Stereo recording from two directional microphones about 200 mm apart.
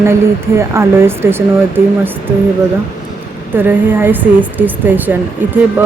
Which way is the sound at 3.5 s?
10° right (ahead or behind).